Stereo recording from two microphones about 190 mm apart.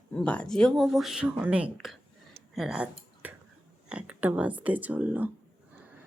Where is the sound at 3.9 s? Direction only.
5° right (ahead or behind).